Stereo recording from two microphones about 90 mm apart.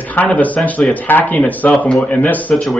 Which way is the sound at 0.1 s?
20° left (ahead or behind).